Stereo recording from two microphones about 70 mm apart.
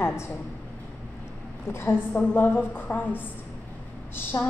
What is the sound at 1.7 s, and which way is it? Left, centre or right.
A woman's voice, left.